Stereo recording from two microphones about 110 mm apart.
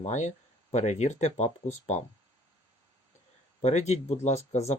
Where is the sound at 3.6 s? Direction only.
90° left.